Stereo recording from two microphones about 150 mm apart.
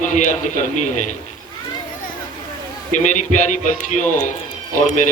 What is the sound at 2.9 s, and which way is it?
Speech, 55° left (ahead or behind).